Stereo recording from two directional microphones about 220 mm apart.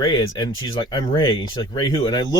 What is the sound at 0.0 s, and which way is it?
Speech, 20° left (ahead or behind).